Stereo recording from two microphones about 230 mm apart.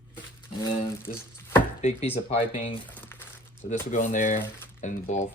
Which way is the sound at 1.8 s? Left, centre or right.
Left.